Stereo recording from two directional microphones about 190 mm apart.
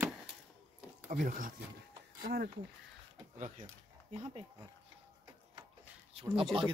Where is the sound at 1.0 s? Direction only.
45° right (ahead or behind).